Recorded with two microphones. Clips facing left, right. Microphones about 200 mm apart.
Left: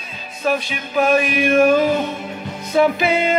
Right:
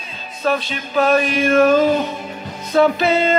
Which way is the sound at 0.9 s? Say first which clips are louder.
Right 1 dB; 15° left (ahead or behind).